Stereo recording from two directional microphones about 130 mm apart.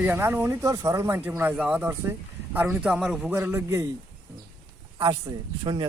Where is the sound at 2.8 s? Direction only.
5° right (ahead or behind).